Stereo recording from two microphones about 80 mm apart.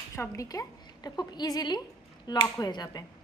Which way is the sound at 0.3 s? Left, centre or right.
Left.